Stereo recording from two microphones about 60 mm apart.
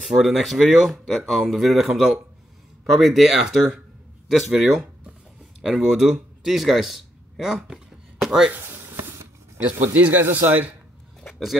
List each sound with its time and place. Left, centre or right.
0.0 s speech: centre
5.8 s speech: centre
8.5 s a sound: right
9.9 s speech: right